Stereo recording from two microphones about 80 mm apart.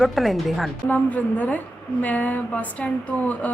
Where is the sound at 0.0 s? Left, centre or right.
Centre.